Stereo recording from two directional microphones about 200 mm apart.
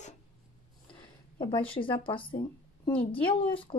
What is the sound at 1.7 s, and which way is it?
A woman's voice, 25° left (ahead or behind).